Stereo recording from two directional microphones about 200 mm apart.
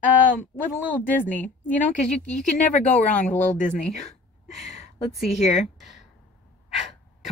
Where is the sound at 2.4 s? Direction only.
40° left (ahead or behind).